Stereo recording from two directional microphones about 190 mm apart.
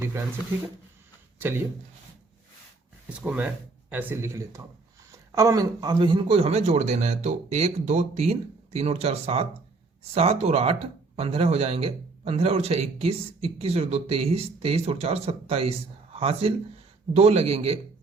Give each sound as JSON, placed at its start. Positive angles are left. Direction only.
{"t": 1.4, "sound": "speech", "side_deg": -10}
{"t": 3.1, "sound": "a man's voice", "side_deg": -5}